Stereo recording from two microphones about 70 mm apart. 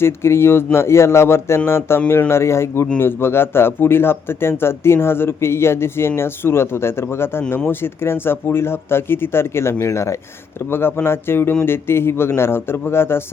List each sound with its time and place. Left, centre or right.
0.0 s speech: left